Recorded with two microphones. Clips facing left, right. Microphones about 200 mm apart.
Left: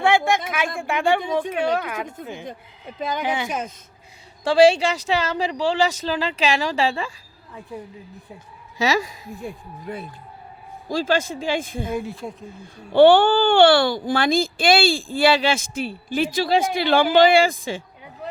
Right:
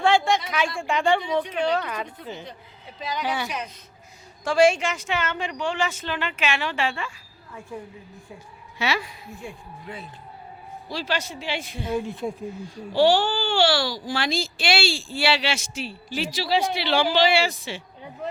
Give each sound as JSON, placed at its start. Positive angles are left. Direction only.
{"t": 0.3, "sound": "speech", "side_deg": 50}
{"t": 0.8, "sound": "a woman's voice", "side_deg": 5}
{"t": 1.2, "sound": "speech", "side_deg": 50}
{"t": 1.8, "sound": "a woman's voice", "side_deg": 10}
{"t": 2.3, "sound": "speech", "side_deg": 50}
{"t": 4.4, "sound": "speech", "side_deg": 30}
{"t": 8.8, "sound": "speech", "side_deg": 40}
{"t": 11.9, "sound": "speech", "side_deg": 0}
{"t": 12.6, "sound": "speech", "side_deg": 55}